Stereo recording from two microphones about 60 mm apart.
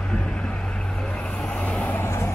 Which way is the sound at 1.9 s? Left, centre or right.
Left.